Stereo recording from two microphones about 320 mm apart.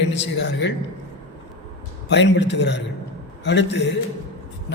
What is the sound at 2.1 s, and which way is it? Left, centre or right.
A man's voice, left.